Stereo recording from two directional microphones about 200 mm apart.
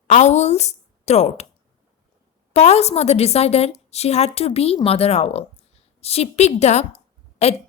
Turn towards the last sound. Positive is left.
turn(degrees=30)  # may be behind; listen again after turning